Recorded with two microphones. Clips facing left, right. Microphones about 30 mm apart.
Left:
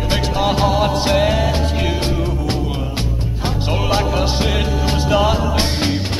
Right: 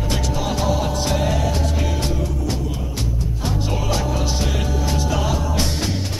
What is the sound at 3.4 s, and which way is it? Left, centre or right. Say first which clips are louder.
Music: left 4 dB; left.